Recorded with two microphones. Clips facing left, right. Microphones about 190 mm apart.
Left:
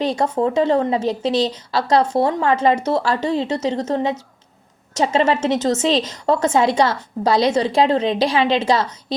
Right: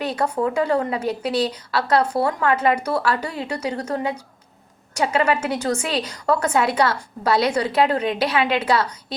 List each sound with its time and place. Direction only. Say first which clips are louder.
0.2 s a woman's voice: left 1 dB; 25° left (ahead or behind)